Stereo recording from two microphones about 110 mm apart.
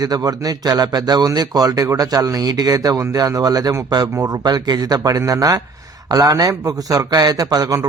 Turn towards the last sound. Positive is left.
turn(degrees=-30)  # may be behind; listen again after turning